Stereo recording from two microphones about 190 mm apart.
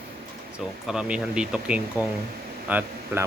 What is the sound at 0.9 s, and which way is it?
Speech, 5° right (ahead or behind).